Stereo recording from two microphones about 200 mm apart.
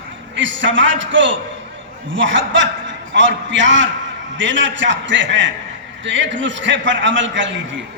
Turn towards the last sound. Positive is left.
turn(degrees=-65)  # may be behind; listen again after turning